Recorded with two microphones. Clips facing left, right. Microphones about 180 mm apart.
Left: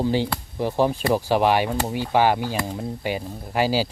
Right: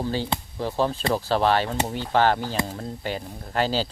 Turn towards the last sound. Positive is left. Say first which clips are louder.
# left 3 dB
turn(degrees=10)  # may be behind; listen again after turning